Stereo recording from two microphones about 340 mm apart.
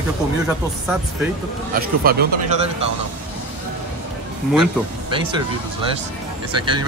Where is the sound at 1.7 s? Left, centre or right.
Right.